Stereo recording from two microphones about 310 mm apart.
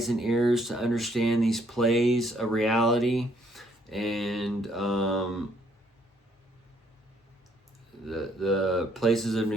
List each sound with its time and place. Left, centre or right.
0.0 s speech: centre
8.0 s speech: centre